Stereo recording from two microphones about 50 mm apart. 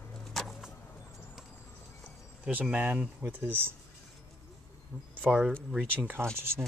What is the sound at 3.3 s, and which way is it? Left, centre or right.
Speech, right.